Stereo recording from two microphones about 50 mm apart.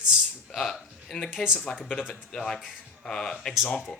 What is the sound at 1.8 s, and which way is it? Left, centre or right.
Speech, left.